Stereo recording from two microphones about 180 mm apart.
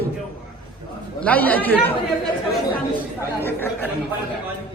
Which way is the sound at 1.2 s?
10° left (ahead or behind).